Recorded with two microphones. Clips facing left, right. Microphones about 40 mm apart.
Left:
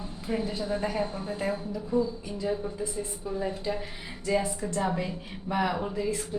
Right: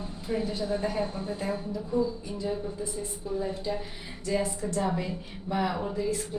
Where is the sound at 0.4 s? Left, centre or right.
Centre.